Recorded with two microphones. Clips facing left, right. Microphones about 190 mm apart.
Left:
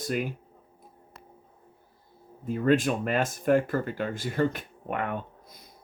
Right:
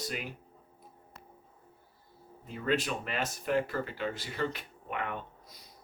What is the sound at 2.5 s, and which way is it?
Speech, 50° left (ahead or behind).